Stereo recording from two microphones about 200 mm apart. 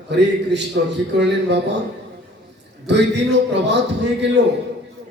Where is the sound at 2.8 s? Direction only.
60° right (ahead or behind).